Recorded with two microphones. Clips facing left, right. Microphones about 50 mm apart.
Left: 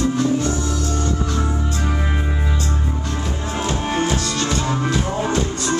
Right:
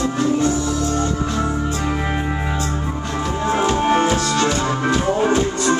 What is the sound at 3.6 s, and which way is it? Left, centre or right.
Music, right.